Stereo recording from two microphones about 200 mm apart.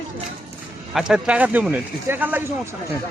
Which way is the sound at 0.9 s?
5° right (ahead or behind).